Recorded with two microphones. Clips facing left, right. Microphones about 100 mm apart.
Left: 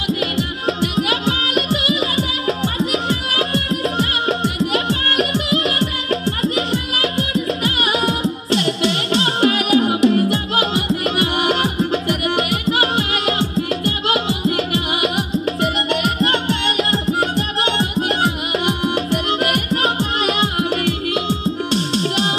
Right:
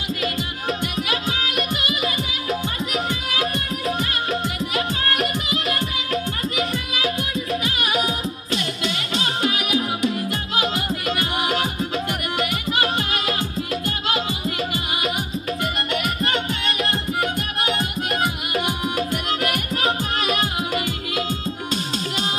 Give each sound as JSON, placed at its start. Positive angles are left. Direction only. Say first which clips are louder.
{"t": 2.8, "sound": "music", "louder": "left 5 dB", "side_deg": 30}
{"t": 4.8, "sound": "music", "louder": "left 4 dB", "side_deg": 85}
{"t": 7.6, "sound": "music", "louder": "left 4 dB", "side_deg": 80}
{"t": 10.6, "sound": "music", "louder": "left 5 dB", "side_deg": 30}
{"t": 11.3, "sound": "music", "louder": "left 5 dB", "side_deg": 75}
{"t": 13.8, "sound": "music", "louder": "left 5 dB", "side_deg": 90}
{"t": 20.5, "sound": "music", "louder": "left 5 dB", "side_deg": 65}